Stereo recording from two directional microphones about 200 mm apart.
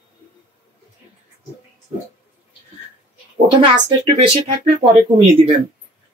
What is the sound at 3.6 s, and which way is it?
Speech, 25° right (ahead or behind).